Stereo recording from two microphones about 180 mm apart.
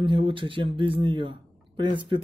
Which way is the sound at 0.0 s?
30° right (ahead or behind).